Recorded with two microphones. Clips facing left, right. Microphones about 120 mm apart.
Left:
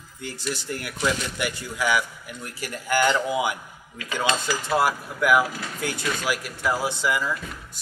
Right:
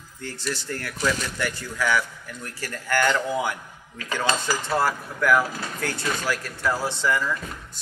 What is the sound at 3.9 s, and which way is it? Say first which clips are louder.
Speech: even; 40° right (ahead or behind).